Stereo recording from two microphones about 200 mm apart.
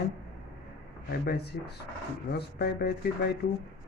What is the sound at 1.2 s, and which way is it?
Speech, 55° left (ahead or behind).